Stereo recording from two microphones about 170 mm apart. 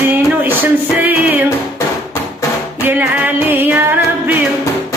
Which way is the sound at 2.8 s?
10° right (ahead or behind).